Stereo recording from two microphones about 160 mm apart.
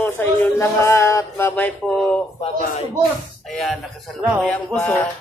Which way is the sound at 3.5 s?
Centre (ahead or behind).